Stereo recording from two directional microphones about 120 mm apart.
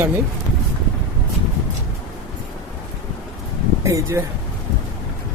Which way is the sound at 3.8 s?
25° right (ahead or behind).